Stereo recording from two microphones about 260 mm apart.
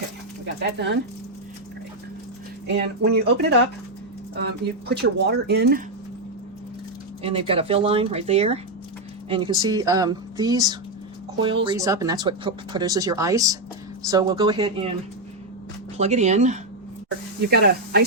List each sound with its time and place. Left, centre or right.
0.4 s speech: right
2.6 s speech: right
4.9 s speech: right
7.2 s speech: right
16.0 s speech: right
17.4 s speech: right